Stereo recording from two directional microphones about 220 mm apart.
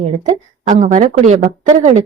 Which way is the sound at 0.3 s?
35° right (ahead or behind).